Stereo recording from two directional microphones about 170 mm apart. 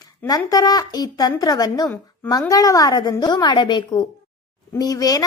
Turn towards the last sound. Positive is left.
turn(degrees=20)  # may be behind; listen again after turning